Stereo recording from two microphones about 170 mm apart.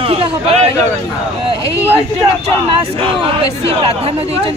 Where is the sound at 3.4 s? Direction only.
35° right (ahead or behind).